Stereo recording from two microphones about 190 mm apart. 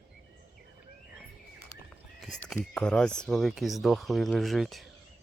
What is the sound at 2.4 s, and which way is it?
Speech, 5° left (ahead or behind).